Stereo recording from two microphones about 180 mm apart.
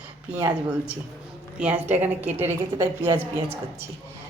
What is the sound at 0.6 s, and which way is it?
Speech, 5° right (ahead or behind).